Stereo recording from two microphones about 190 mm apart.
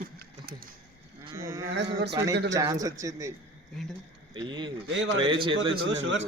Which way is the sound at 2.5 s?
20° right (ahead or behind).